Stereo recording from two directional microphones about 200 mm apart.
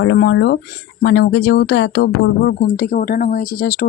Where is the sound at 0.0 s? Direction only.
65° left (ahead or behind).